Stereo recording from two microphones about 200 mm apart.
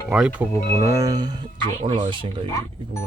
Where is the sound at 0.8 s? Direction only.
15° right (ahead or behind).